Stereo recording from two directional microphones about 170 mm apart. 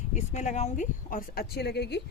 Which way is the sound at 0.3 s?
45° left (ahead or behind).